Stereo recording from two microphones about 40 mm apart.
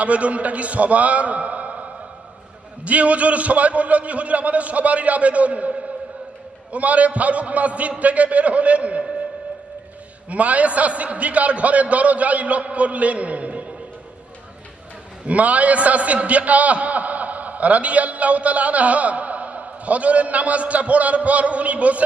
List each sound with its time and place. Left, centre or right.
0.0 s a man's voice: right
2.8 s a man's voice: right
10.2 s a man's voice: right
15.3 s a man's voice: right